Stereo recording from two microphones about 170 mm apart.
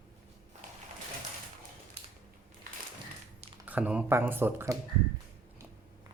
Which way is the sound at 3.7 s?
10° right (ahead or behind).